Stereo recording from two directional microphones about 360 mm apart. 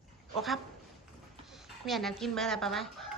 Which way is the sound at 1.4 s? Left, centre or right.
Centre.